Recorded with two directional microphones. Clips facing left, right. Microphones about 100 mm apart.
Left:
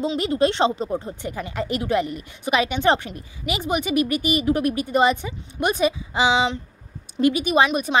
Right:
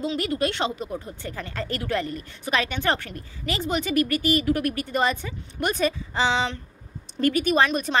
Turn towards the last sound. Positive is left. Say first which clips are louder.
# left 2 dB
turn(degrees=15)  # may be behind; listen again after turning